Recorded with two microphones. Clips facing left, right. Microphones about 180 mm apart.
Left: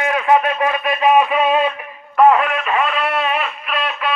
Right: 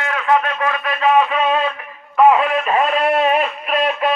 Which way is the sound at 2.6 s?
35° right (ahead or behind).